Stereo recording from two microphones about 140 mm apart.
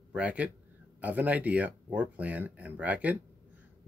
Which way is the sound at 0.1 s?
10° right (ahead or behind).